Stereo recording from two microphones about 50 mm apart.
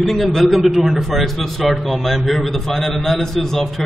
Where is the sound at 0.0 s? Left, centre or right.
Centre.